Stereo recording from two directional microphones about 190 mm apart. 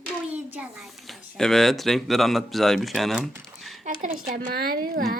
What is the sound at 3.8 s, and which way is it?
Speech, 40° right (ahead or behind).